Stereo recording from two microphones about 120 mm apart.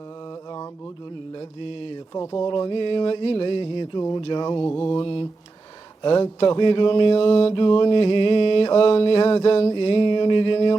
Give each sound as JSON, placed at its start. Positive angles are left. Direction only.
{"t": 1.4, "sound": "mantra", "side_deg": 45}
{"t": 2.1, "sound": "speech", "side_deg": 25}
{"t": 2.5, "sound": "mantra", "side_deg": 45}
{"t": 4.2, "sound": "speech", "side_deg": 40}
{"t": 4.6, "sound": "mantra", "side_deg": 15}
{"t": 4.9, "sound": "mantra", "side_deg": 45}
{"t": 6.0, "sound": "speech", "side_deg": 40}
{"t": 6.2, "sound": "mantra", "side_deg": 40}